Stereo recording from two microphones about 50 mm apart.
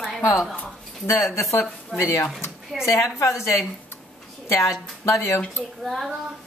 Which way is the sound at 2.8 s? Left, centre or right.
Left.